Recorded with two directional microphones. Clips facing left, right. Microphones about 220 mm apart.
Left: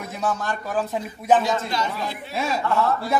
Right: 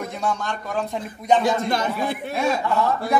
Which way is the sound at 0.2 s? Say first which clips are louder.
Left 2 dB; 5° left (ahead or behind).